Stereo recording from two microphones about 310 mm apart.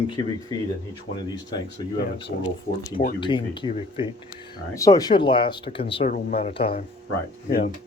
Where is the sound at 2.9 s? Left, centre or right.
Centre.